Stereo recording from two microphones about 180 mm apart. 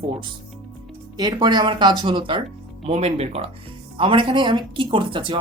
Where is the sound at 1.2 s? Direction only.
25° right (ahead or behind).